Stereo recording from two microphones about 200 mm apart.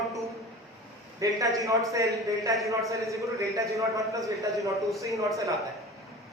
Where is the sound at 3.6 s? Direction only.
15° right (ahead or behind).